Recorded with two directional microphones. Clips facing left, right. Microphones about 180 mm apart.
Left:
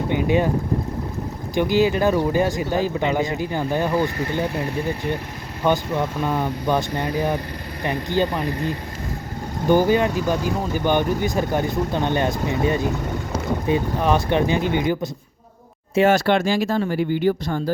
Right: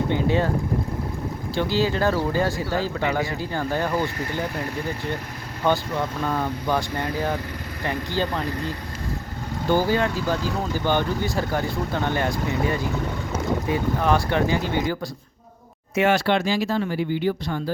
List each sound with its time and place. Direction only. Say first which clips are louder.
0.1 s speech: left 5 dB; 15° left (ahead or behind)
1.5 s speech: left 5 dB; 15° left (ahead or behind)
5.6 s speech: left 2 dB; 15° left (ahead or behind)
16.0 s speech: left 3 dB; 45° left (ahead or behind)